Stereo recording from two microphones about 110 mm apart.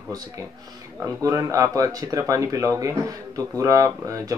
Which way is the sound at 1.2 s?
30° right (ahead or behind).